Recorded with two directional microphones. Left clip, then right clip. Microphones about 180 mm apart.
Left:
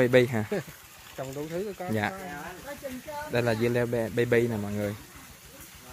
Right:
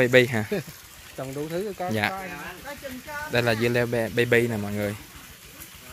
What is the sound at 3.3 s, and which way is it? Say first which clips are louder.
Speech: right 3 dB; centre (ahead or behind).